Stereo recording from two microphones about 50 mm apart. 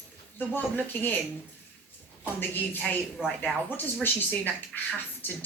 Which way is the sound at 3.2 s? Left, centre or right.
Centre.